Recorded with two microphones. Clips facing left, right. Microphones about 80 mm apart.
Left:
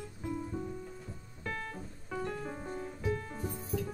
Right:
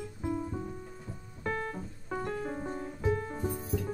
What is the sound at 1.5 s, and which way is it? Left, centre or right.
Music, right.